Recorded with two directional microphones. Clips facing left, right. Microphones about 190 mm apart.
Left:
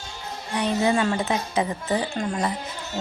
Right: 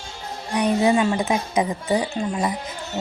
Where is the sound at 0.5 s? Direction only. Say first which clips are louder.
Right 4 dB; 15° right (ahead or behind).